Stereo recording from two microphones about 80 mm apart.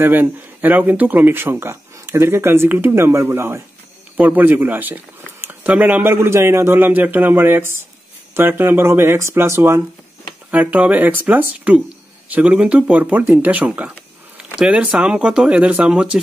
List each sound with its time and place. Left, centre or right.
0.0 s speech: right
10.5 s speech: centre